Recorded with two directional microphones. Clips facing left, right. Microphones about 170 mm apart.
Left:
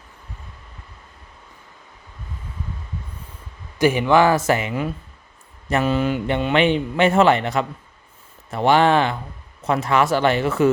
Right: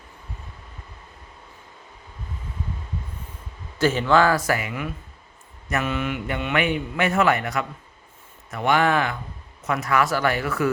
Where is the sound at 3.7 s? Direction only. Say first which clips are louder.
Left 3 dB; 15° left (ahead or behind).